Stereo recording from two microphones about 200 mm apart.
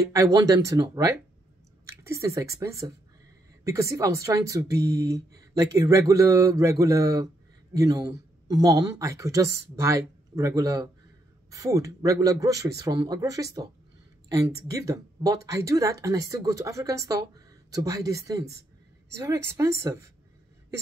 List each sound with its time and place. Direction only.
0.0 s speech: 15° right (ahead or behind)